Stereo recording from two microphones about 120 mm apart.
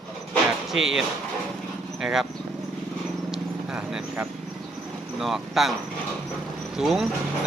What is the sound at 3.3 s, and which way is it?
Clip-clop, 5° right (ahead or behind).